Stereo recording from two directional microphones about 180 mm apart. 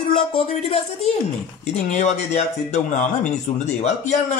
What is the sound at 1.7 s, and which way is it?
Speech, 40° left (ahead or behind).